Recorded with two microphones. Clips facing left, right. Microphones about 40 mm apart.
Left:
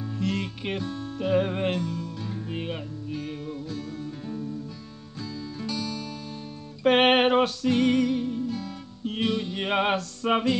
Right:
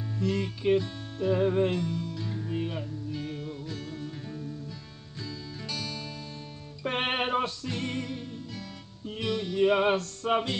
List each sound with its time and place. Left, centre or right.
0.2 s music: left
3.6 s music: right
4.0 s music: centre
6.8 s music: left
8.2 s music: left
9.6 s music: left
9.9 s music: left